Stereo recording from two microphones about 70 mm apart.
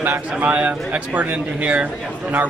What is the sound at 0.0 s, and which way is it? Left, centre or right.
Speech, right.